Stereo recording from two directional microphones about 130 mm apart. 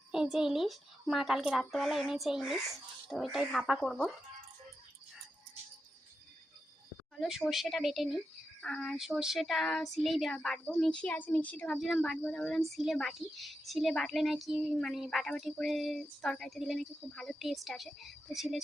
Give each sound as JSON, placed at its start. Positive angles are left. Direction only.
{"t": 0.1, "sound": "a woman's voice", "side_deg": -5}
{"t": 7.2, "sound": "a woman's voice", "side_deg": -5}